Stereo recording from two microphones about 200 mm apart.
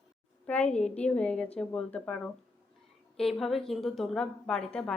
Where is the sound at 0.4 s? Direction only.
5° left (ahead or behind).